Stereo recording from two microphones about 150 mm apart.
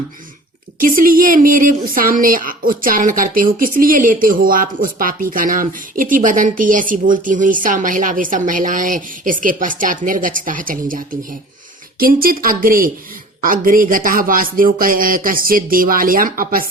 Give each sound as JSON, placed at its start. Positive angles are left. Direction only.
{"t": 0.8, "sound": "speech", "side_deg": -65}
{"t": 11.9, "sound": "speech", "side_deg": -75}